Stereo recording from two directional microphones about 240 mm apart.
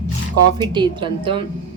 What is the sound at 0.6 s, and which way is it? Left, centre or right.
Speech, centre.